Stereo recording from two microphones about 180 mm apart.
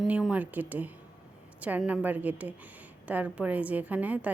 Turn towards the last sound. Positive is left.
turn(degrees=-10)  # may be behind; listen again after turning